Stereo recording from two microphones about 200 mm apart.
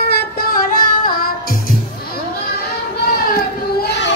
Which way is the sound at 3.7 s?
60° left (ahead or behind).